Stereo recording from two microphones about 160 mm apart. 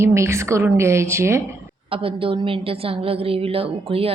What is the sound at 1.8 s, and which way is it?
A woman's voice, 35° right (ahead or behind).